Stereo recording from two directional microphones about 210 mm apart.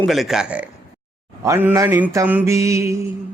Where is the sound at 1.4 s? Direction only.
10° right (ahead or behind).